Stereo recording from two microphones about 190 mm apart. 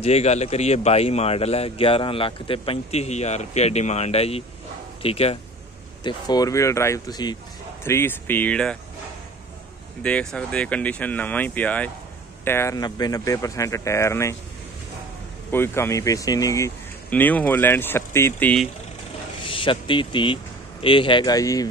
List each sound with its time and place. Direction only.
0.0 s speech: 35° left (ahead or behind); by 8.7 s 5° left (ahead or behind)
10.0 s speech: 5° left (ahead or behind)
15.5 s speech: 10° left (ahead or behind)
19.4 s speech: 25° left (ahead or behind)